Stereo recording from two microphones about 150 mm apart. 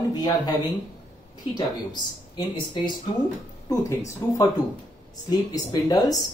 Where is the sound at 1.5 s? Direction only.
30° left (ahead or behind).